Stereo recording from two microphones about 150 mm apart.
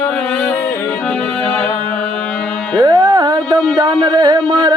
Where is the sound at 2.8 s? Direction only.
25° right (ahead or behind).